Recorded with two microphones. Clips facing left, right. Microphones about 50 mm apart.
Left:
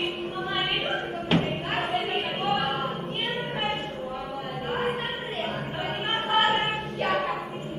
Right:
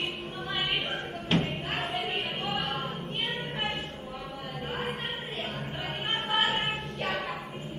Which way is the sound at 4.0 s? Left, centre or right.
Centre.